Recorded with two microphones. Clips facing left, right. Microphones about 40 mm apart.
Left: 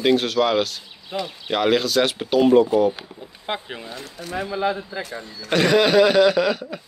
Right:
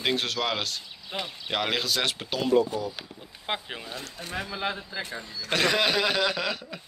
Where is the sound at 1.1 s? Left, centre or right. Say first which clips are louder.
Left 6 dB; right.